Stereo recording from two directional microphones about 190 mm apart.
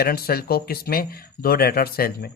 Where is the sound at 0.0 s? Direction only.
55° left (ahead or behind).